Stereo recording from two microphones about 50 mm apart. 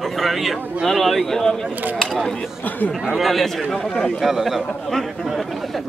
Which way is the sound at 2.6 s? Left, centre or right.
Left.